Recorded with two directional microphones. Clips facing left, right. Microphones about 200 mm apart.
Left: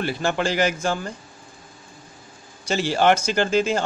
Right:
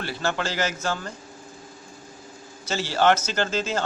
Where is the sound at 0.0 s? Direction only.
15° left (ahead or behind).